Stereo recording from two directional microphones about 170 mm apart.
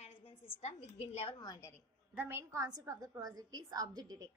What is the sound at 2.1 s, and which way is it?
A woman's voice, 15° right (ahead or behind).